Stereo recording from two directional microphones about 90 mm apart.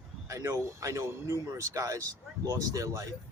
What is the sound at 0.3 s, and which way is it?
Speech, 30° right (ahead or behind).